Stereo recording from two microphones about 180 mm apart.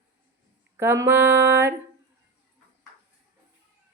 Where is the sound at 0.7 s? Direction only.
15° right (ahead or behind).